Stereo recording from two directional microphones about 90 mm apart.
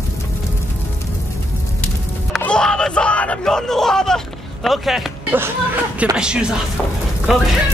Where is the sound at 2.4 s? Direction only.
10° left (ahead or behind).